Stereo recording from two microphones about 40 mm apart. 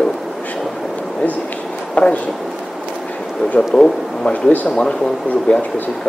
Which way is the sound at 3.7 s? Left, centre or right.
Left.